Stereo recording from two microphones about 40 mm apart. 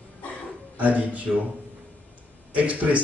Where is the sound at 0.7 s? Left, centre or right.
Right.